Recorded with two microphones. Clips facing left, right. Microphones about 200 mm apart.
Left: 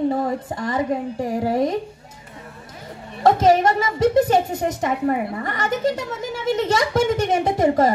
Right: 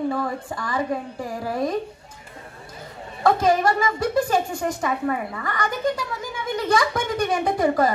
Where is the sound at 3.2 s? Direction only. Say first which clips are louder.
Left 4 dB; 20° left (ahead or behind).